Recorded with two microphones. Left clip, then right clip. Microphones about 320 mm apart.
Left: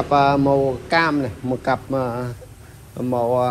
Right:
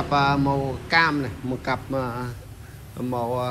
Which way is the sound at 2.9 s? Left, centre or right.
Left.